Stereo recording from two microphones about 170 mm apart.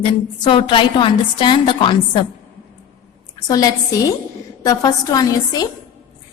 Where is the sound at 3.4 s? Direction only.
20° left (ahead or behind).